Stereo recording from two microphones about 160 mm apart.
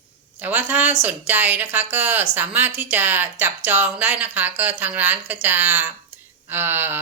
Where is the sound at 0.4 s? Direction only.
10° right (ahead or behind).